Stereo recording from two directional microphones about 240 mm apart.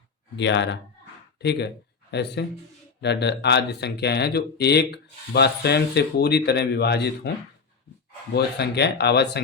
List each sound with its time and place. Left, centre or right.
0.3 s speech: left
8.3 s speech: left